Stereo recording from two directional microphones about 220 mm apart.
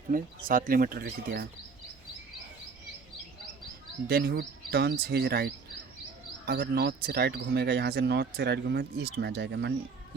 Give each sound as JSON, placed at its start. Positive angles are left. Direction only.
{"t": 0.1, "sound": "speech", "side_deg": -40}
{"t": 4.1, "sound": "speech", "side_deg": -45}